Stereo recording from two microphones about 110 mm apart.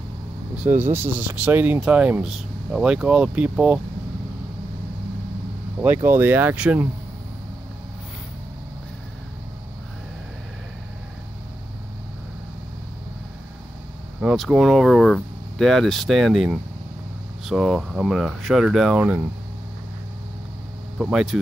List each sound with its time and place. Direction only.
0.6 s speech: 15° right (ahead or behind)
2.2 s speech: 5° right (ahead or behind)
6.0 s speech: 20° right (ahead or behind)
14.2 s speech: 5° right (ahead or behind)
17.5 s speech: centre (ahead or behind)
21.0 s speech: 5° right (ahead or behind)